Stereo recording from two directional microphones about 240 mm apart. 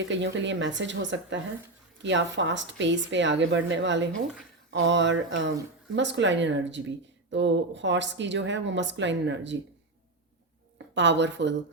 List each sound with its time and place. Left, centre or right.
0.0 s speech: right
10.9 s speech: right